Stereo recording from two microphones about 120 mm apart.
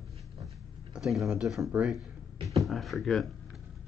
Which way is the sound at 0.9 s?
Centre (ahead or behind).